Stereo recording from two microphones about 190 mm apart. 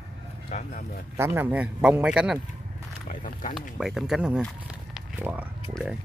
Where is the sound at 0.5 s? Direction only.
40° left (ahead or behind).